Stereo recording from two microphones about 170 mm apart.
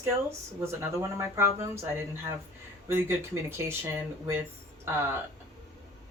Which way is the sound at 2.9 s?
15° right (ahead or behind).